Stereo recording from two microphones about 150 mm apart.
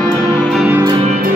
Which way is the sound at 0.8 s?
30° right (ahead or behind).